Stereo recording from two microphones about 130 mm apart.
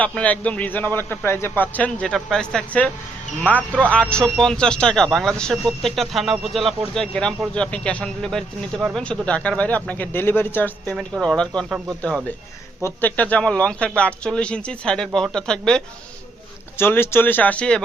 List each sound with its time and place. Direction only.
0.0 s speech: 10° left (ahead or behind)
12.8 s speech: 15° left (ahead or behind)
16.7 s speech: 15° left (ahead or behind)